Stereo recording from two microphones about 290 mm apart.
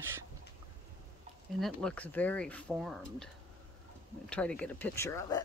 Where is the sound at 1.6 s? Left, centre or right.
Centre.